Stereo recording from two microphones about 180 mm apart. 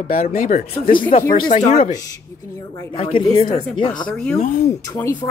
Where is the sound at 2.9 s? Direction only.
30° left (ahead or behind).